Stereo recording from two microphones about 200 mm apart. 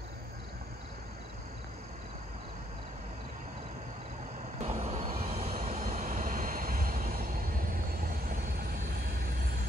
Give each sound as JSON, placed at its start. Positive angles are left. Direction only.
{"t": 4.6, "sound": "vehicle", "side_deg": -35}